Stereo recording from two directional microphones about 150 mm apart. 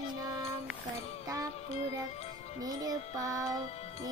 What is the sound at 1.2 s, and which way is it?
Music, 25° right (ahead or behind).